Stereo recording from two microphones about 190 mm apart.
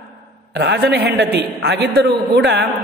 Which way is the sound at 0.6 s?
65° right (ahead or behind).